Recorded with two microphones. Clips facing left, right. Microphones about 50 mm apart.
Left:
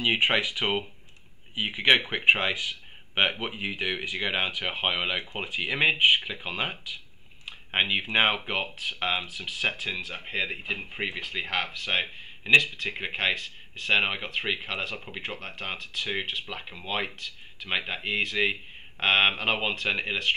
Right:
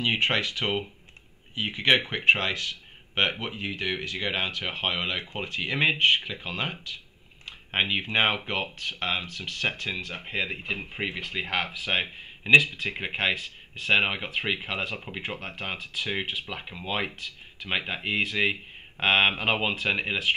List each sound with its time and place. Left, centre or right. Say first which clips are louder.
0.0 s speech: left 1 dB; centre